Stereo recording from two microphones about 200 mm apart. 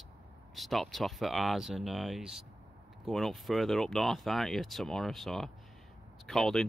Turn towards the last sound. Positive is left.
turn(degrees=0)  # may be behind; listen again after turning